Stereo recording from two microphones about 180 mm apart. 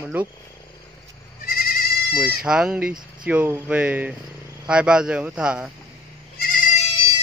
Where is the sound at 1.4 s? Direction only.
55° left (ahead or behind).